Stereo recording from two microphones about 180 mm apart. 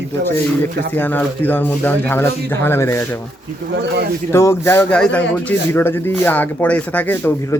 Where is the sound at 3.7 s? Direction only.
75° right (ahead or behind).